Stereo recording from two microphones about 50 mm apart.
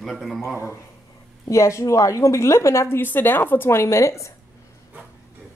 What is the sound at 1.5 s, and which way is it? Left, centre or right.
A woman's voice, left.